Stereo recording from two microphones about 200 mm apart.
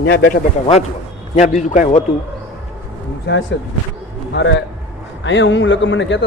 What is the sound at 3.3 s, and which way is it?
Speech, 65° left (ahead or behind).